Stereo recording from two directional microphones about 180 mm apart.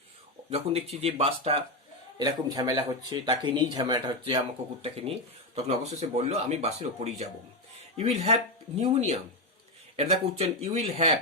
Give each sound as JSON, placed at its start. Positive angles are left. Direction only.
{"t": 0.5, "sound": "speech", "side_deg": -35}
{"t": 2.1, "sound": "speech", "side_deg": -20}